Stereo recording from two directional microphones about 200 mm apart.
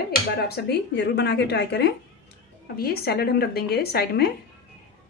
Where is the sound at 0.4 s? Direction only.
50° left (ahead or behind).